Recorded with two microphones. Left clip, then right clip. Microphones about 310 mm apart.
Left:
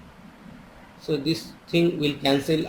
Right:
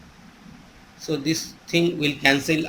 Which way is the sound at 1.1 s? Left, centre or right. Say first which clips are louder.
Right 1 dB; right.